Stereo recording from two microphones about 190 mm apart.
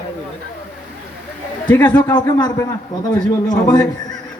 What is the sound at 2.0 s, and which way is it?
Speech, 20° left (ahead or behind).